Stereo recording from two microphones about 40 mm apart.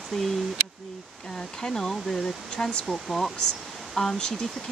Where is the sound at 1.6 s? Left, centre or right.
Centre.